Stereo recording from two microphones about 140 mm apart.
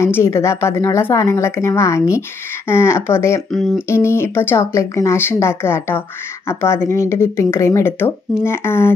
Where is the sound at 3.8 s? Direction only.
20° left (ahead or behind).